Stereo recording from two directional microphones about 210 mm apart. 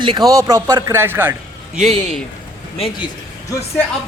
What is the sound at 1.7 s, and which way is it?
Speech, centre (ahead or behind).